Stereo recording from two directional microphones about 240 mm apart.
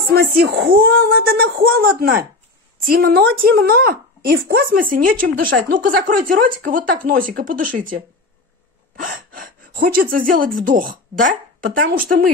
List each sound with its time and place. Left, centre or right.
0.1 s speech: right
9.0 s speech: right